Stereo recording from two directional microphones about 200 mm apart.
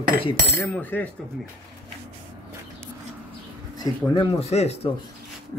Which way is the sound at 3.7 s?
25° left (ahead or behind).